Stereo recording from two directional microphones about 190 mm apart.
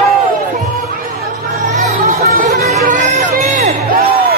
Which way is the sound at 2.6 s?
35° right (ahead or behind).